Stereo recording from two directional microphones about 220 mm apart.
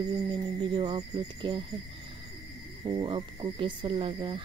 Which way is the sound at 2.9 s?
20° right (ahead or behind).